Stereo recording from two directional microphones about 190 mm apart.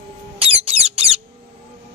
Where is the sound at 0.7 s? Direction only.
30° right (ahead or behind).